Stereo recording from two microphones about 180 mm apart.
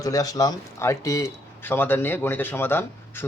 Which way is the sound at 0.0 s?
20° left (ahead or behind).